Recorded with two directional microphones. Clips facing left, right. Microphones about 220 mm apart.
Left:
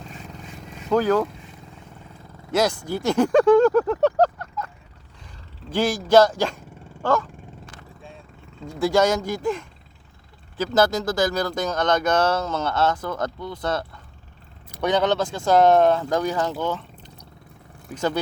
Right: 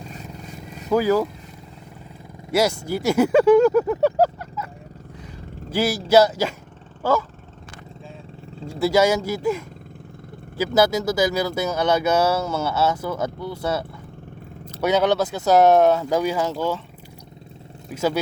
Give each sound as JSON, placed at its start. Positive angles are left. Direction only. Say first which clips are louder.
{"t": 0.9, "sound": "speech", "louder": "right 1 dB", "side_deg": -10}
{"t": 2.5, "sound": "speech", "louder": "right 1 dB", "side_deg": -10}
{"t": 5.7, "sound": "speech", "louder": "even", "side_deg": -5}
{"t": 7.0, "sound": "vehicle", "louder": "right 1 dB", "side_deg": -5}
{"t": 8.8, "sound": "speech", "louder": "right 1 dB", "side_deg": -5}
{"t": 17.9, "sound": "speech", "louder": "right 2 dB", "side_deg": -10}